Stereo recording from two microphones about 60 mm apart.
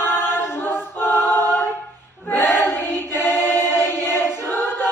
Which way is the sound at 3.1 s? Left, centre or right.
Left.